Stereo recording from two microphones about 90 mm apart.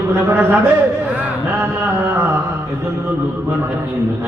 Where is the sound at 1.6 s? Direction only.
25° right (ahead or behind).